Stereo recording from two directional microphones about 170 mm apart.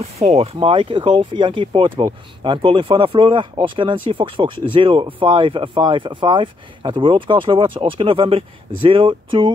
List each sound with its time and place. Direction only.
0.0 s speech: 40° right (ahead or behind)